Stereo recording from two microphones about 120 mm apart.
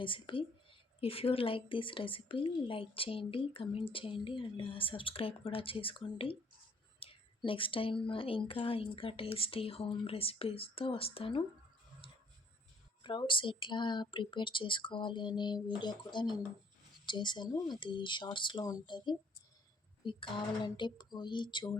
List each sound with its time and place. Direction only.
0.0 s a woman's voice: 45° left (ahead or behind)
12.0 s tick-tock: 45° left (ahead or behind)
13.0 s a woman's voice: 45° left (ahead or behind)